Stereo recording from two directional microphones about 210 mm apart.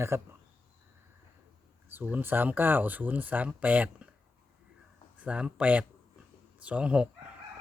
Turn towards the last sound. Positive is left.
turn(degrees=-5)  # may be behind; listen again after turning